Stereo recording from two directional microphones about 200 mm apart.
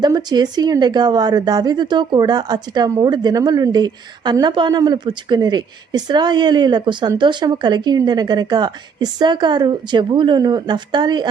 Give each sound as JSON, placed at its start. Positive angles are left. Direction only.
{"t": 0.0, "sound": "speech", "side_deg": -20}